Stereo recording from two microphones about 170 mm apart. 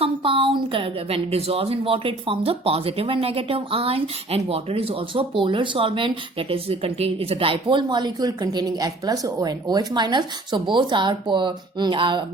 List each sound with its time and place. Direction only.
0.0 s a woman's voice: 30° right (ahead or behind)